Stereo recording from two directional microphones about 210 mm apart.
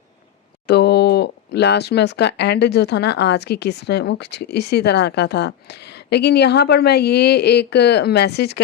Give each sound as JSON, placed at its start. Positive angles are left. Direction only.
{"t": 0.7, "sound": "speech", "side_deg": 55}